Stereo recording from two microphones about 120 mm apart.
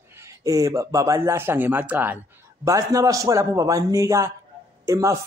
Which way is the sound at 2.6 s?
25° right (ahead or behind).